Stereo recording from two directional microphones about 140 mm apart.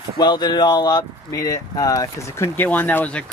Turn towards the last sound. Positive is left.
turn(degrees=10)  # may be behind; listen again after turning